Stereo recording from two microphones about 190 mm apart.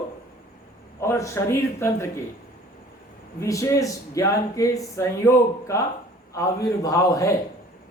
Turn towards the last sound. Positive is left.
turn(degrees=15)  # may be behind; listen again after turning